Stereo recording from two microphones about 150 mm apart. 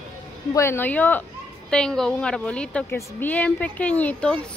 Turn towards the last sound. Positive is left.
turn(degrees=10)  # may be behind; listen again after turning